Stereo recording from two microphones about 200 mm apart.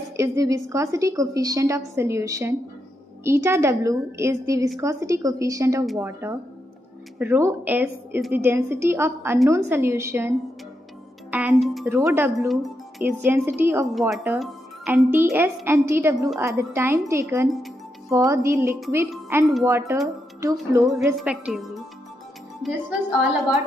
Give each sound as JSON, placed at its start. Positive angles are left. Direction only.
{"t": 0.2, "sound": "a woman's voice", "side_deg": -15}
{"t": 11.9, "sound": "a woman's voice", "side_deg": -10}
{"t": 13.9, "sound": "a woman's voice", "side_deg": 0}
{"t": 21.2, "sound": "a woman's voice", "side_deg": -5}